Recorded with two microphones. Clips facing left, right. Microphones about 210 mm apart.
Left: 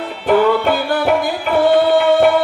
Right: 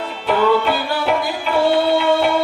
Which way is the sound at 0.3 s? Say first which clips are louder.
Left 3 dB; 50° left (ahead or behind).